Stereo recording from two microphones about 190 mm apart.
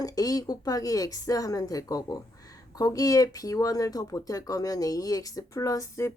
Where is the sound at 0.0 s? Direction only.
20° left (ahead or behind).